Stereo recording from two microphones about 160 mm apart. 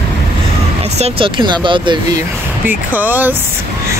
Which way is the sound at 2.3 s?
10° right (ahead or behind).